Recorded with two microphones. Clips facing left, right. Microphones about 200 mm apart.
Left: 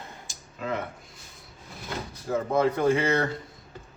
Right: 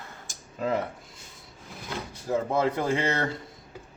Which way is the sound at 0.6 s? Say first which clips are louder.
Right 4 dB; 40° right (ahead or behind).